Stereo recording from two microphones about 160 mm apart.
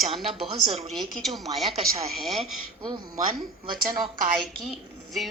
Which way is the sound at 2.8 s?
25° right (ahead or behind).